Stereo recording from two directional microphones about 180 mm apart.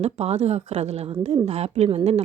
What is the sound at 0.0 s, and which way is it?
A woman's voice, 35° right (ahead or behind).